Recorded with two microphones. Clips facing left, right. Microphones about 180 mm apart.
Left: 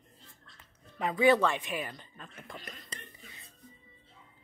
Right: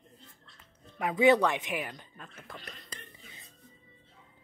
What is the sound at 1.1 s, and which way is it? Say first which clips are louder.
Speech: right 2 dB; 20° right (ahead or behind).